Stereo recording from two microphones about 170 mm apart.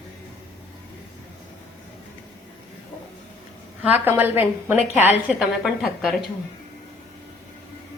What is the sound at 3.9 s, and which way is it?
A woman's voice, 10° right (ahead or behind).